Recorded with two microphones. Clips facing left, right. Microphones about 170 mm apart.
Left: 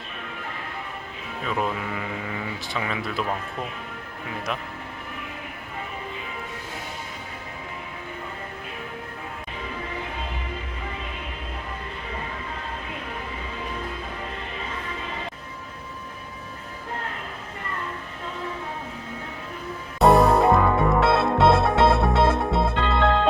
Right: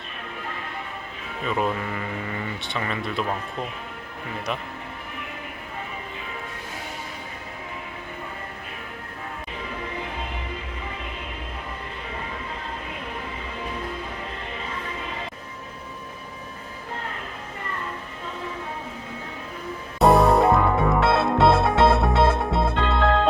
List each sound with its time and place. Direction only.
1.5 s speech: centre (ahead or behind)
20.0 s music: centre (ahead or behind)